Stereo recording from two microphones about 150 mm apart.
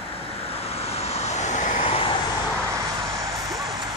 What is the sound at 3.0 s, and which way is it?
Vehicle, 25° right (ahead or behind).